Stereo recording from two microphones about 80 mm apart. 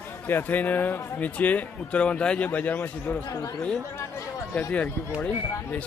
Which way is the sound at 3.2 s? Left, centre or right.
Left.